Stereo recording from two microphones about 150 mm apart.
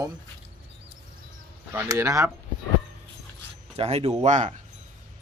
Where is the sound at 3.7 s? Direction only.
45° right (ahead or behind).